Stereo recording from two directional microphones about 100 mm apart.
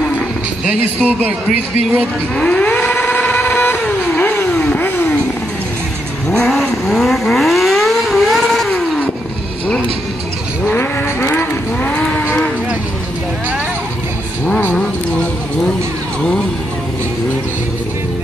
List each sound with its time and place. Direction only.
2.0 s speech: 10° left (ahead or behind)
3.1 s vehicle: 15° left (ahead or behind)
6.4 s vehicle: 5° left (ahead or behind)
10.6 s vehicle: 20° left (ahead or behind)
14.4 s vehicle: 20° left (ahead or behind)